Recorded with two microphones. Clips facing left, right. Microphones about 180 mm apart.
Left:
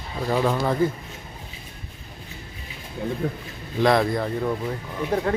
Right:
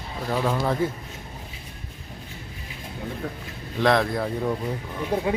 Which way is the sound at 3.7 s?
Centre (ahead or behind).